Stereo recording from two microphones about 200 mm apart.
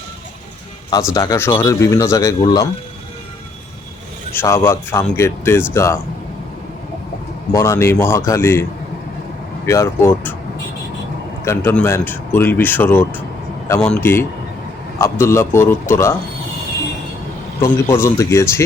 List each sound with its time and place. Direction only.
1.1 s speech: 20° left (ahead or behind)
4.4 s speech: 15° left (ahead or behind)
7.5 s speech: 15° left (ahead or behind)
9.6 s speech: 15° left (ahead or behind)
11.4 s speech: 10° left (ahead or behind)
17.6 s speech: 15° left (ahead or behind)